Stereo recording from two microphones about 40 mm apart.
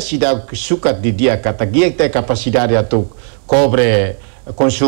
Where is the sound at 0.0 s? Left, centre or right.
Left.